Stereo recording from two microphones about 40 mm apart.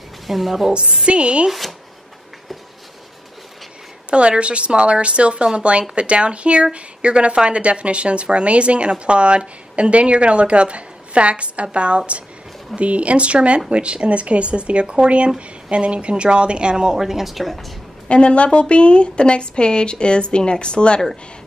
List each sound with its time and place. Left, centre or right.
0.3 s a woman's voice: centre
1.0 s speech: right
4.1 s speech: right; by 17.6 s centre
18.0 s a woman's voice: left